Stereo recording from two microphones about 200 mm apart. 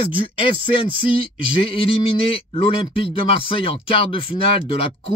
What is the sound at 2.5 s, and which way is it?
Speech, 25° left (ahead or behind).